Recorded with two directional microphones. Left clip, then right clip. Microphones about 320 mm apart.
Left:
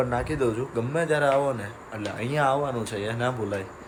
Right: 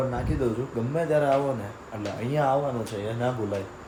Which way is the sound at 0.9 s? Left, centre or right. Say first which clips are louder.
Even; centre.